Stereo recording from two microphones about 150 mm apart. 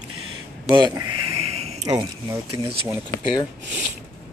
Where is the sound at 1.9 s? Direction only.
30° right (ahead or behind).